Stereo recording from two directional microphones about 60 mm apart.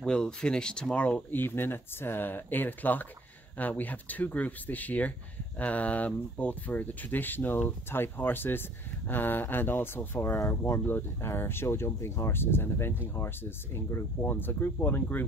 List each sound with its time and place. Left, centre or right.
0.0 s speech: centre
1.3 s speech: left
10.9 s speech: left